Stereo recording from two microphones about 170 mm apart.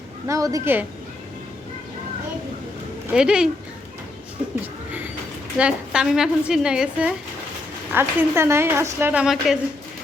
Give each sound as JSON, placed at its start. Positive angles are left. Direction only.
{"t": 0.3, "sound": "a woman's voice", "side_deg": -20}
{"t": 3.1, "sound": "a woman's voice", "side_deg": -5}
{"t": 4.6, "sound": "a sound", "side_deg": -10}
{"t": 5.5, "sound": "a woman's voice", "side_deg": -5}
{"t": 7.9, "sound": "a woman's voice", "side_deg": -15}